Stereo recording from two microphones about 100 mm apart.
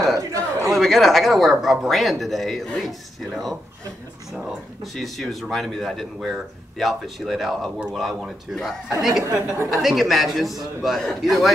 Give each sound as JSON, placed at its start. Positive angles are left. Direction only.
{"t": 0.2, "sound": "a sound", "side_deg": -35}
{"t": 0.7, "sound": "speech", "side_deg": 0}
{"t": 4.9, "sound": "speech", "side_deg": 0}
{"t": 9.2, "sound": "speech", "side_deg": -30}
{"t": 9.7, "sound": "speech", "side_deg": 0}